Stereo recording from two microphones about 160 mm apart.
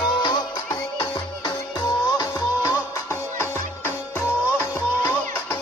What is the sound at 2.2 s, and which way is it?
Music, 15° left (ahead or behind).